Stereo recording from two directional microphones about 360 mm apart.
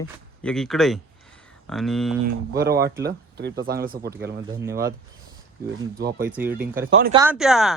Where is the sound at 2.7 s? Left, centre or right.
Centre.